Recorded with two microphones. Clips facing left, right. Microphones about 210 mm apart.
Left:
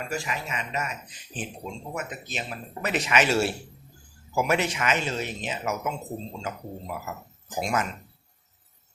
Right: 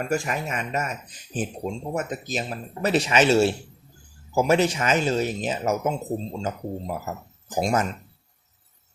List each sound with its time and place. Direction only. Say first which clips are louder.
0.0 s speech: right 6 dB; 50° right (ahead or behind)